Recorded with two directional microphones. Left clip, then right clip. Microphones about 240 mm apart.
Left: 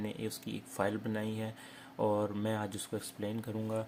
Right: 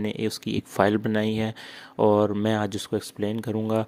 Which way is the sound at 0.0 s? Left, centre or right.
Right.